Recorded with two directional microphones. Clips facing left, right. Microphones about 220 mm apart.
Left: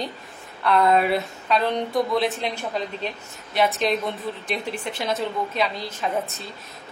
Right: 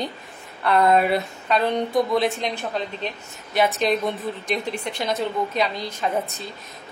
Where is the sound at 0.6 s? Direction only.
Centre (ahead or behind).